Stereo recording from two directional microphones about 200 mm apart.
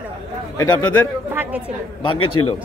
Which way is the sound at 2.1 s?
90° left.